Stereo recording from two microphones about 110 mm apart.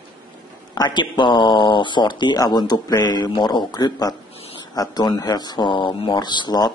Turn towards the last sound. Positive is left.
turn(degrees=40)  # may be behind; listen again after turning